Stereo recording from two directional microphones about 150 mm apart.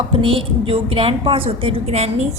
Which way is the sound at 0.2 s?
35° right (ahead or behind).